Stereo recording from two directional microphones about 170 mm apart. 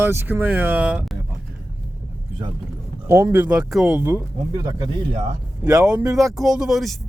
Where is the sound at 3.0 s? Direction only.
15° right (ahead or behind).